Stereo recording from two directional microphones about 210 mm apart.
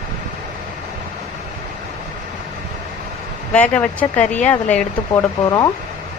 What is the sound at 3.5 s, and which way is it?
A woman's voice, 5° left (ahead or behind).